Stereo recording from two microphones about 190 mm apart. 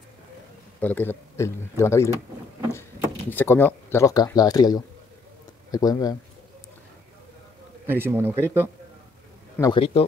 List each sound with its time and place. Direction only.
0.7 s speech: 10° left (ahead or behind)
3.3 s speech: 10° left (ahead or behind)
7.8 s speech: 10° right (ahead or behind)
9.6 s speech: 25° left (ahead or behind)